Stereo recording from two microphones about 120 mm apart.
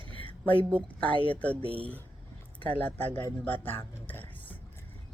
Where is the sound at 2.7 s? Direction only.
15° left (ahead or behind).